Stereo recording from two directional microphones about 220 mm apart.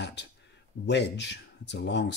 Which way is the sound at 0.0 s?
50° left (ahead or behind).